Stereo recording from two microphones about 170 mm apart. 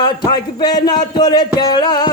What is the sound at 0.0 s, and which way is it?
A man's voice, 25° left (ahead or behind).